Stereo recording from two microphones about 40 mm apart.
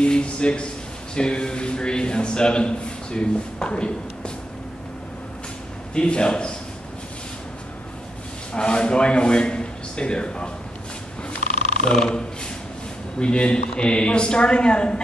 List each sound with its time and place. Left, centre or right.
0.0 s a man's voice: left
5.9 s a man's voice: left
8.5 s a man's voice: left
11.8 s speech: centre
13.2 s a man's voice: left